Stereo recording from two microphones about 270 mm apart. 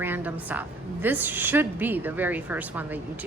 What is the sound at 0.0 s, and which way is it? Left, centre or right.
A woman's voice, centre.